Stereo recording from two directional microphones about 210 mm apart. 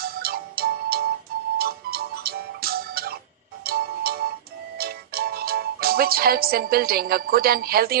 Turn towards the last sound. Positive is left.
turn(degrees=-45)  # may be behind; listen again after turning